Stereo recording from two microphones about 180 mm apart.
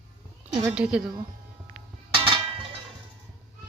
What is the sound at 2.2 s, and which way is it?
Music, 30° right (ahead or behind).